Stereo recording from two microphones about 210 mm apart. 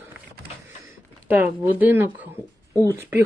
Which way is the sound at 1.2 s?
10° right (ahead or behind).